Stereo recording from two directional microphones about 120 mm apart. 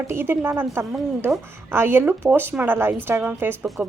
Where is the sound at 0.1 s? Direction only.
20° right (ahead or behind).